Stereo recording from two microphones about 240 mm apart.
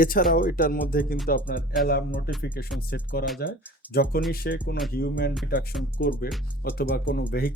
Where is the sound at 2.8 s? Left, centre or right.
Left.